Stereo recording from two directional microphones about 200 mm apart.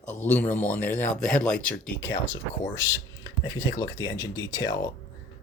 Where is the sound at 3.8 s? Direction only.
15° left (ahead or behind).